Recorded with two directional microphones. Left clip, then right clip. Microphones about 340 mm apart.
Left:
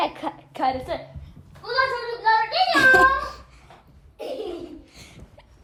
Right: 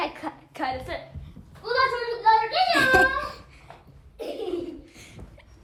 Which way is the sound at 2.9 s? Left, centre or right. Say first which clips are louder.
Left 3 dB; centre.